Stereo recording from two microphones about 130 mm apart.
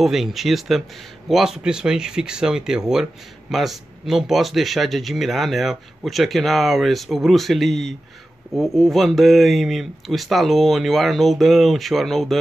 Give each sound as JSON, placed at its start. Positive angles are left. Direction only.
{"t": 0.0, "sound": "speech", "side_deg": 0}